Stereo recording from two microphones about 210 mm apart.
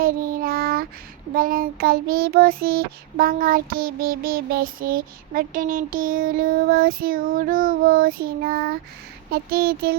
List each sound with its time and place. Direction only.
0.0 s child singing: 40° right (ahead or behind)